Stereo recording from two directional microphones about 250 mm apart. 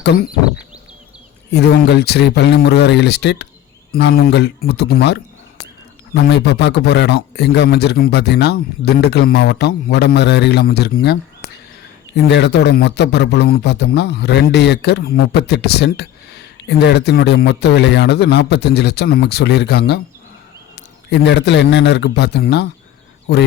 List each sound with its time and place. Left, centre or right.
0.0 s a sound: left
1.5 s a man's voice: left
6.2 s a man's voice: left
21.1 s a man's voice: left